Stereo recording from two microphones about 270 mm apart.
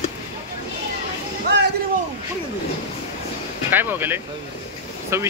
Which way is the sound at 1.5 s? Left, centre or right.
Right.